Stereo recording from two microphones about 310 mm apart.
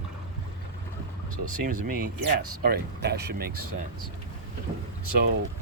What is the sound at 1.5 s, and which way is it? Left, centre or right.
Speech, right.